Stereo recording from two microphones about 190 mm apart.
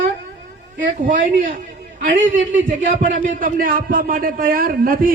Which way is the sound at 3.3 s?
45° right (ahead or behind).